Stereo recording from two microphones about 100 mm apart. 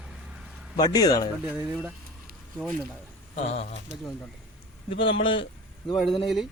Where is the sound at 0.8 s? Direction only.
45° left (ahead or behind).